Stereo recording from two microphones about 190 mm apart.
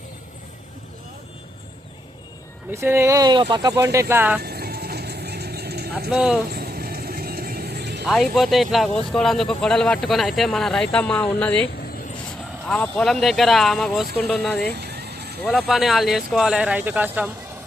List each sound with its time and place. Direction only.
2.7 s speech: 15° right (ahead or behind)
4.4 s vehicle: 55° right (ahead or behind)
6.1 s speech: 5° right (ahead or behind)
6.5 s vehicle: 55° right (ahead or behind)
8.0 s speech: centre (ahead or behind)
14.7 s music: 60° right (ahead or behind)
15.4 s speech: centre (ahead or behind)